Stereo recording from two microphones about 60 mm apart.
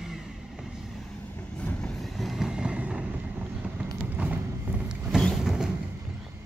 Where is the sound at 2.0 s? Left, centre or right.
Centre.